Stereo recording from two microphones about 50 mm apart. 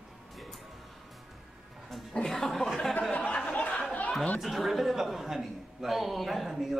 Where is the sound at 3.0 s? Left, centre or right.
Left.